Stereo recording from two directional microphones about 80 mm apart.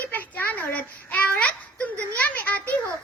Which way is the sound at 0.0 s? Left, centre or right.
Left.